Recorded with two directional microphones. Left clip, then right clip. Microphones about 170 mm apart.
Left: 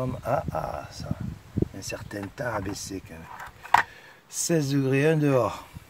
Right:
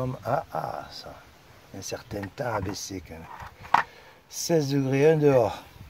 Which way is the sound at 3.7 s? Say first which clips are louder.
Left 2 dB; 15° left (ahead or behind).